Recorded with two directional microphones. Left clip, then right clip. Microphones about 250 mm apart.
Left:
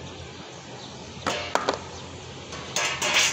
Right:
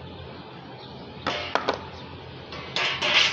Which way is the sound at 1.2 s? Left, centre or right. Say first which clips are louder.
Even; left.